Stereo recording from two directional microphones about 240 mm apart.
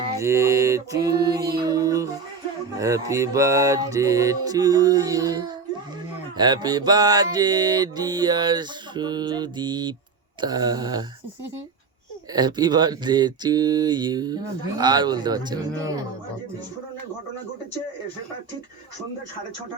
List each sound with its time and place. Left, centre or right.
0.2 s speech: centre
1.6 s music: centre
2.7 s speech: centre
12.3 s speech: centre